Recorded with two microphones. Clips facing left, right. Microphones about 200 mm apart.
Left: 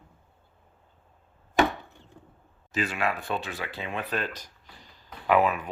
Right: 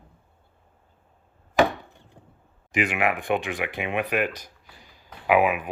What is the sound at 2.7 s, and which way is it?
A man's voice, 15° right (ahead or behind).